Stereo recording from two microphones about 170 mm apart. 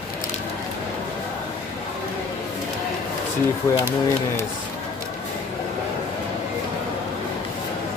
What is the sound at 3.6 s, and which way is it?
Speech, 20° left (ahead or behind).